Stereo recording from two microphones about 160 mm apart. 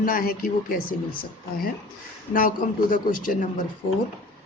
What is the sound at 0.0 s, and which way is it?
A woman's voice, 60° left (ahead or behind).